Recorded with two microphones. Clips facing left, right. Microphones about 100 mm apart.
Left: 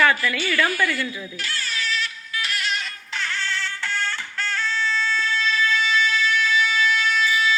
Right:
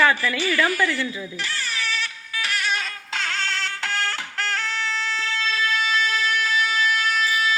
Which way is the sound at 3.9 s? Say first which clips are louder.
Right 1 dB; 75° right (ahead or behind).